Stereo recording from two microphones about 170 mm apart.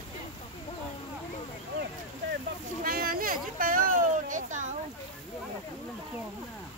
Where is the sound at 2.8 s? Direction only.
60° right (ahead or behind).